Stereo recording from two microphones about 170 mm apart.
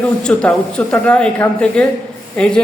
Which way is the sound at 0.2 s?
5° left (ahead or behind).